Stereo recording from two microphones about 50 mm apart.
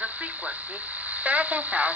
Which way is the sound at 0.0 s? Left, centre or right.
Right.